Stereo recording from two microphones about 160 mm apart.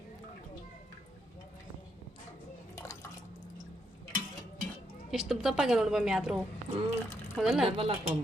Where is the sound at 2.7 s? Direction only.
15° left (ahead or behind).